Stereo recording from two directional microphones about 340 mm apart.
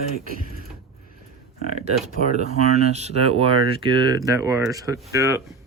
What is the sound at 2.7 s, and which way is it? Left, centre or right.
Speech, centre.